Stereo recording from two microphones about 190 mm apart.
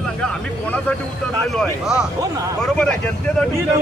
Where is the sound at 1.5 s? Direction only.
5° right (ahead or behind).